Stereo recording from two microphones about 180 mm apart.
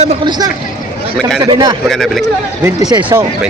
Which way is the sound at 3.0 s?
10° right (ahead or behind).